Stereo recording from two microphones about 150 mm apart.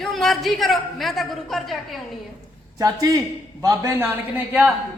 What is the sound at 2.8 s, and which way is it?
Speech, 25° right (ahead or behind).